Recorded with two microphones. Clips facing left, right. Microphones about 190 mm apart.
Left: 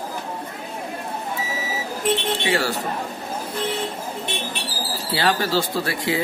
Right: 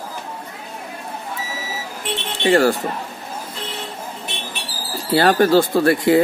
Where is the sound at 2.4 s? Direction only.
50° right (ahead or behind).